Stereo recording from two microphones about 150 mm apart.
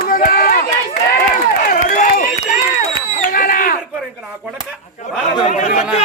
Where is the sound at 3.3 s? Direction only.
70° left (ahead or behind).